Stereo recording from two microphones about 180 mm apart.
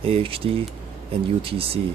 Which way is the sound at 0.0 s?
30° right (ahead or behind).